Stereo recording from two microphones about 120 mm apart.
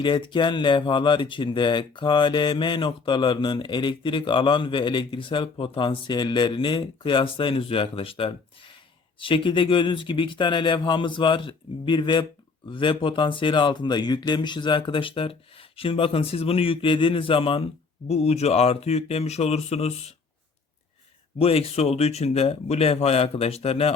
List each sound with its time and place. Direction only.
0.0 s speech: 45° left (ahead or behind)
18.1 s speech: 60° left (ahead or behind)
21.3 s speech: 55° left (ahead or behind)